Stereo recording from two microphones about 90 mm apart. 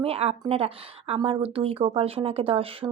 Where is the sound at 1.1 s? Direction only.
70° right (ahead or behind); by 2.8 s 90° right.